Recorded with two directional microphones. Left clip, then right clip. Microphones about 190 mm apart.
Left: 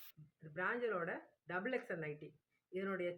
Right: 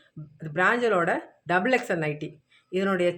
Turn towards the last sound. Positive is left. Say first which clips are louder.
# right 17 dB
turn(degrees=-30)  # may be behind; listen again after turning